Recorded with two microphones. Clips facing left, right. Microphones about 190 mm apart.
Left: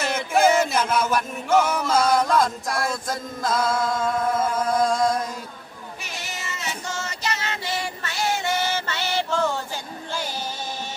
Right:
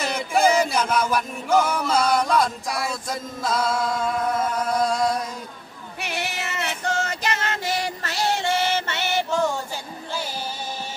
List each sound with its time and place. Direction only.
0.0 s chant: 5° left (ahead or behind)
6.0 s female singing: 65° right (ahead or behind); by 9.6 s 15° right (ahead or behind)